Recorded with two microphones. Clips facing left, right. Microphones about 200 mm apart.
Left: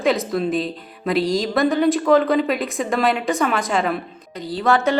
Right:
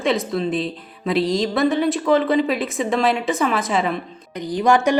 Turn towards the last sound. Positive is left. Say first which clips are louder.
# right 2 dB
turn(degrees=-15)  # may be behind; listen again after turning